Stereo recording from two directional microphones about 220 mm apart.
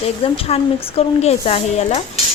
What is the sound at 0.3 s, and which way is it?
Speech, 25° left (ahead or behind).